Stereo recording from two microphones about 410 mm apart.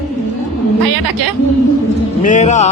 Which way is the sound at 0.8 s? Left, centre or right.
Right.